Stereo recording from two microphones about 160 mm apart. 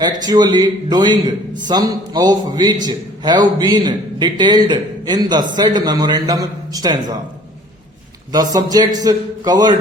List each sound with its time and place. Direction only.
0.2 s a man's voice: 25° right (ahead or behind)
8.3 s a man's voice: 25° right (ahead or behind)